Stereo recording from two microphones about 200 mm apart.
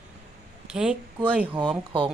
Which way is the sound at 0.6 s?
5° right (ahead or behind).